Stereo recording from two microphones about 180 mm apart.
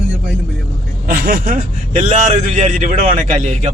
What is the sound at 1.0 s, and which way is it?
A man's voice, 50° right (ahead or behind).